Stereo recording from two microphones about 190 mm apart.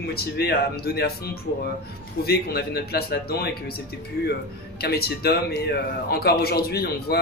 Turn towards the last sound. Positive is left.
turn(degrees=55)  # may be behind; listen again after turning